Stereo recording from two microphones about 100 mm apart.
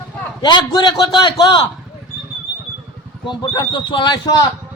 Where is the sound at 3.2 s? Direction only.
50° left (ahead or behind).